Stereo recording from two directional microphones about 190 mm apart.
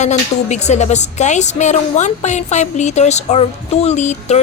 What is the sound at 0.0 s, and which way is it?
Speech, 40° left (ahead or behind).